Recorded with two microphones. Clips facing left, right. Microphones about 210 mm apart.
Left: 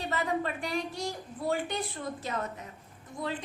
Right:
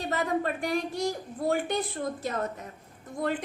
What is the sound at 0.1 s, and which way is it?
A woman's voice, 45° right (ahead or behind).